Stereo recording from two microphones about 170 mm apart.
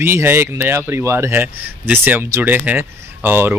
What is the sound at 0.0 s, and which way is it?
Speech, 15° right (ahead or behind).